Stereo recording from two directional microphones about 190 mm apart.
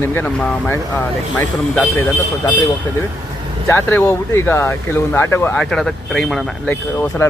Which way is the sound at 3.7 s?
10° left (ahead or behind).